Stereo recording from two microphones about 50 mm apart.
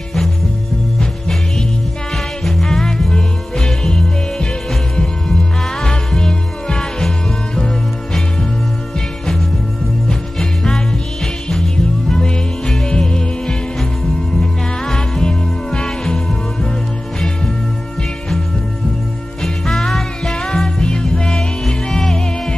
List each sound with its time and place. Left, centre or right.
2.4 s music: centre
10.0 s music: centre
19.4 s music: centre
20.4 s music: centre